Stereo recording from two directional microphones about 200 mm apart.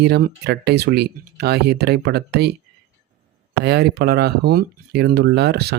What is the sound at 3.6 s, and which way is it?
Speech, 55° right (ahead or behind).